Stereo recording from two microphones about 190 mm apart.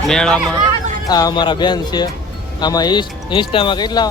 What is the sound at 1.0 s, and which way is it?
Speech, 20° left (ahead or behind).